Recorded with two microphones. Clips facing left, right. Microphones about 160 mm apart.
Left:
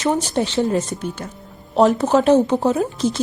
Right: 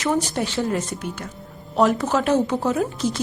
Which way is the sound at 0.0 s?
25° left (ahead or behind).